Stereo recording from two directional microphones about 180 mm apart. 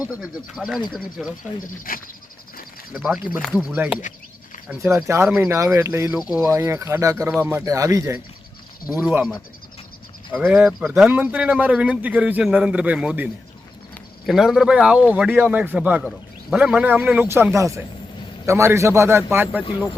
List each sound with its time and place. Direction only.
0.0 s speech: 5° right (ahead or behind)
1.6 s speech: 50° left (ahead or behind)
2.9 s a man's voice: 5° right (ahead or behind)
6.1 s speech: 5° right (ahead or behind)
6.4 s a man's voice: 15° right (ahead or behind)
10.3 s a man's voice: 5° right (ahead or behind)